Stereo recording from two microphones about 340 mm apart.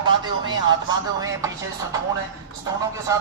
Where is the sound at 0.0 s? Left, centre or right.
Centre.